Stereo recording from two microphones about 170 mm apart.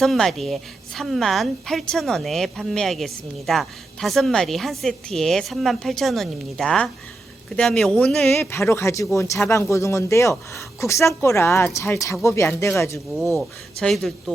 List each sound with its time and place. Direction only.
0.0 s a woman's voice: centre (ahead or behind)
13.3 s a woman's voice: centre (ahead or behind)